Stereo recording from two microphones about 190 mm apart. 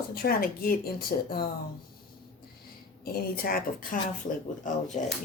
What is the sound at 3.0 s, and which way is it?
Speech, 50° left (ahead or behind).